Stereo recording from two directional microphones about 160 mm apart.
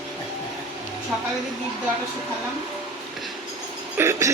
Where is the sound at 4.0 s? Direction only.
20° right (ahead or behind).